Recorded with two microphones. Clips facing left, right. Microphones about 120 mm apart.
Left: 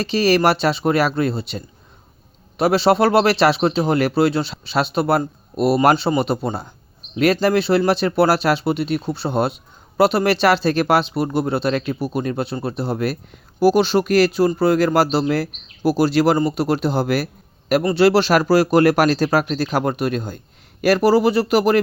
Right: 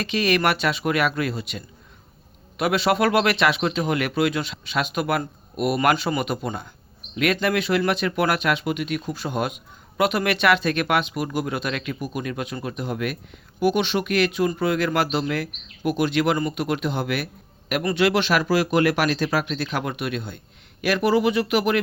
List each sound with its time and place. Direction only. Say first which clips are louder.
0.0 s speech: left 5 dB; 35° left (ahead or behind)